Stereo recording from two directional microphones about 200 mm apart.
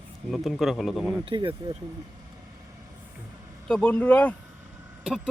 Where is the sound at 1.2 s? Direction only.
25° right (ahead or behind).